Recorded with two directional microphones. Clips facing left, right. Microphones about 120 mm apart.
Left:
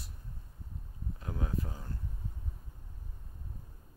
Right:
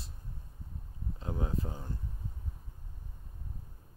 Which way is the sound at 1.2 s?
25° right (ahead or behind).